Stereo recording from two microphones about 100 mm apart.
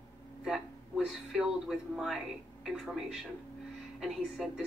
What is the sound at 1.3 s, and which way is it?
Speech, 5° right (ahead or behind).